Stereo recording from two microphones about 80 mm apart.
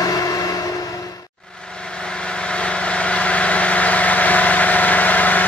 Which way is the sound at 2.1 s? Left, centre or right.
Centre.